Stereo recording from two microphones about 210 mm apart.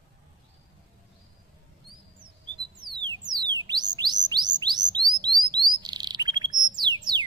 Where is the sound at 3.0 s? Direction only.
20° right (ahead or behind).